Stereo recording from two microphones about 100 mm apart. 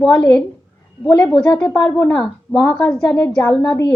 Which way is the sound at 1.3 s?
10° left (ahead or behind).